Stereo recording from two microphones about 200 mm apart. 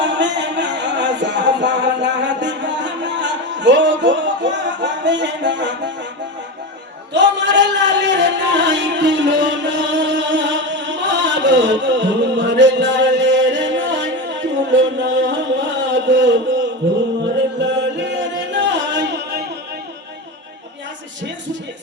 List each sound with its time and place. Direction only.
0.0 s music: 65° right (ahead or behind)
7.1 s music: 65° right (ahead or behind)
14.8 s a sound: 65° right (ahead or behind)
16.8 s music: 60° right (ahead or behind)